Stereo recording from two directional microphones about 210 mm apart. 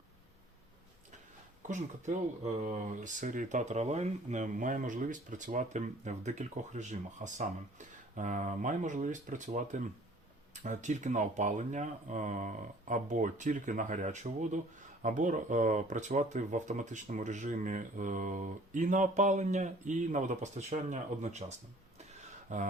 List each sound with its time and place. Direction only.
1.6 s speech: 35° right (ahead or behind)
22.5 s speech: 35° right (ahead or behind)